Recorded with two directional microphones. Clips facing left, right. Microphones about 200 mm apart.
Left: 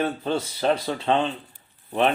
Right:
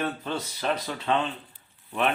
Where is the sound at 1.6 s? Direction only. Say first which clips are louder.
Left 6 dB; 35° left (ahead or behind).